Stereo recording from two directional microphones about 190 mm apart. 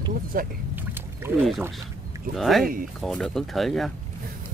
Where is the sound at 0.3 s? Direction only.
50° right (ahead or behind).